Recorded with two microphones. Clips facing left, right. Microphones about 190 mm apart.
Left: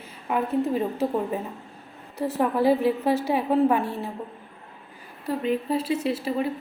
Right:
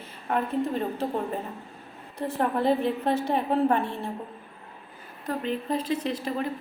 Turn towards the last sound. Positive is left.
turn(degrees=5)  # may be behind; listen again after turning